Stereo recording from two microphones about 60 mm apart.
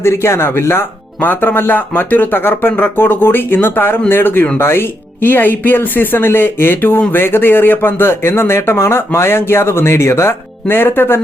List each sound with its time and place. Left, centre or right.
0.0 s speech: left